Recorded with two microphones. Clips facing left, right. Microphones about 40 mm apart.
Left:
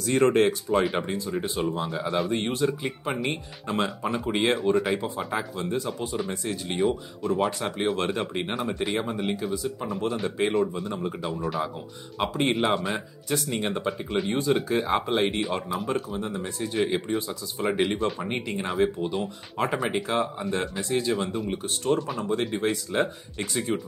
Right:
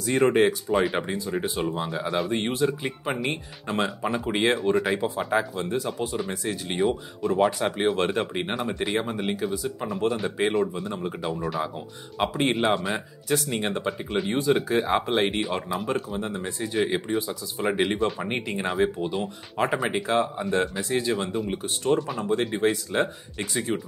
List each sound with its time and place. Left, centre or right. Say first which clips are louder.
0.0 s speech: even; centre
2.3 s speech: right 1 dB; centre
2.6 s speech: right 1 dB; centre
5.3 s speech: right 5 dB; centre
6.1 s speech: right 1 dB; centre